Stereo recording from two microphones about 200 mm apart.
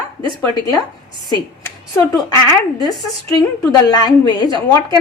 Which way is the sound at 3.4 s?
20° left (ahead or behind).